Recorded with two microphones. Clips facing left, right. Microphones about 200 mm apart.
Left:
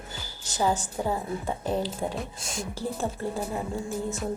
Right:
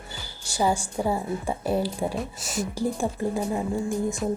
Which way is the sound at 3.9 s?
Centre (ahead or behind).